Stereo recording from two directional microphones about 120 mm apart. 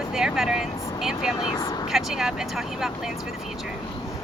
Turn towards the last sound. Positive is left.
turn(degrees=-5)  # may be behind; listen again after turning